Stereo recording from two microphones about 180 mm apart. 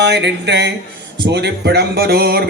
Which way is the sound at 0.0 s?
75° right (ahead or behind).